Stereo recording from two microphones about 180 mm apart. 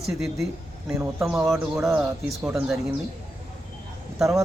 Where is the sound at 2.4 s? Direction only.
5° right (ahead or behind).